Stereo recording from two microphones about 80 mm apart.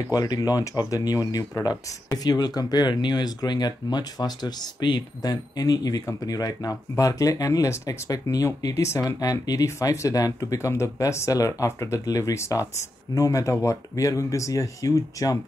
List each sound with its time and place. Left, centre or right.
0.1 s speech: left